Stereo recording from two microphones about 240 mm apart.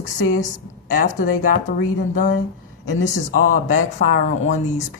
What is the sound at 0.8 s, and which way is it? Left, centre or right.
Speech, left.